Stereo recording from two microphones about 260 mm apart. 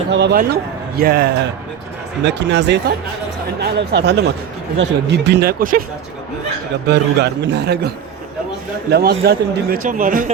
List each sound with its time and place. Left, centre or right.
0.1 s speech: right
6.8 s speech: right